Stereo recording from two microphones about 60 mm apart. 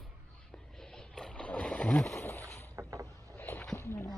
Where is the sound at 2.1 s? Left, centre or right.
Left.